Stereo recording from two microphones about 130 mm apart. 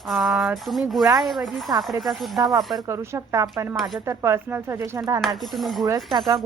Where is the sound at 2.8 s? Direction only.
25° right (ahead or behind).